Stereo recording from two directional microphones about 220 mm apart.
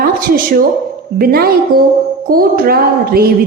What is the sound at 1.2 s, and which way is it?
A woman's voice, 45° right (ahead or behind).